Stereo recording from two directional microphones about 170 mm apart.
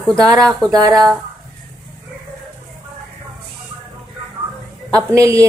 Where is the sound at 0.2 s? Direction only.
20° right (ahead or behind).